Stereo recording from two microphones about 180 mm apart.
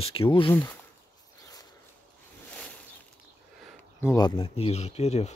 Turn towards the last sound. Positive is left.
turn(degrees=35)  # may be behind; listen again after turning